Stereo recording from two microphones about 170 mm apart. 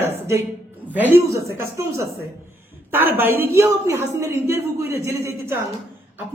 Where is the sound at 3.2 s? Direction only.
10° right (ahead or behind).